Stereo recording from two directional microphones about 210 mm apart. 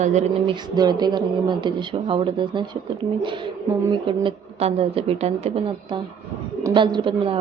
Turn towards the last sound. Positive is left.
turn(degrees=-25)  # may be behind; listen again after turning